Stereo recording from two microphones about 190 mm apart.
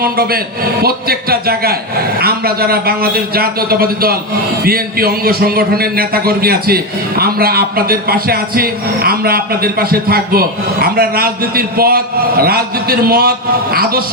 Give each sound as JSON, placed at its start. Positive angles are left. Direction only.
{"t": 0.0, "sound": "a man's voice", "side_deg": -55}